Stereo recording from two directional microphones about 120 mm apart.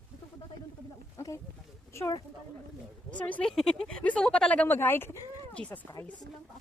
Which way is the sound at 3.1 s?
10° left (ahead or behind).